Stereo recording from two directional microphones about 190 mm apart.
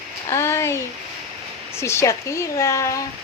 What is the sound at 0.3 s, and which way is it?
A woman's voice, 15° left (ahead or behind).